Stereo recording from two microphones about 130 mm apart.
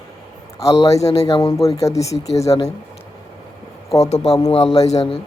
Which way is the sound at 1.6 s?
25° left (ahead or behind).